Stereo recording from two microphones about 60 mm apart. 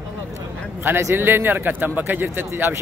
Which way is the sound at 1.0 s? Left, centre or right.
Right.